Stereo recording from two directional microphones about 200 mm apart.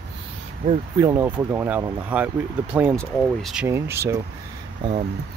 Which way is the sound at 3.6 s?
10° right (ahead or behind).